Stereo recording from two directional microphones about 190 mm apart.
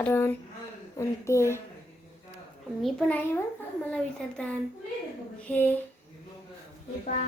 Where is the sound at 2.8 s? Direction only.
Centre (ahead or behind).